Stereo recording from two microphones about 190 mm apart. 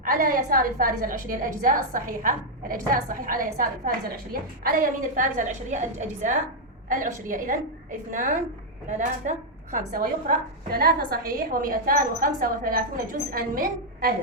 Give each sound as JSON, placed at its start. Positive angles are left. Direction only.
{"t": 0.0, "sound": "a woman's voice", "side_deg": -45}